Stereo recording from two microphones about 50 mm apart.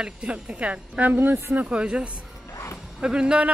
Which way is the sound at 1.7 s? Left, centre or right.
Right.